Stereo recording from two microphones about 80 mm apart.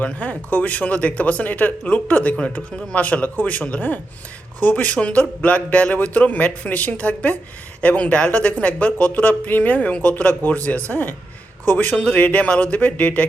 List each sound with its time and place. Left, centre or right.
0.0 s speech: centre